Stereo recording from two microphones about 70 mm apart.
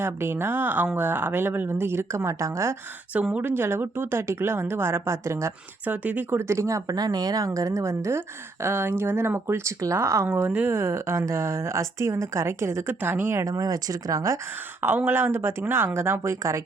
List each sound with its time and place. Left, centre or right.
0.0 s speech: right
3.4 s speech: right
5.8 s speech: right
6.5 s a woman's voice: right
10.2 s a woman's voice: right
13.0 s speech: right
13.4 s speech: right
14.8 s speech: right